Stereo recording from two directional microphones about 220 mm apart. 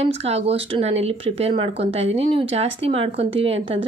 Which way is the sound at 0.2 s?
30° right (ahead or behind).